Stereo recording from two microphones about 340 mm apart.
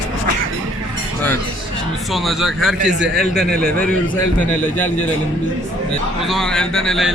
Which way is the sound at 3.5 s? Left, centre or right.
Right.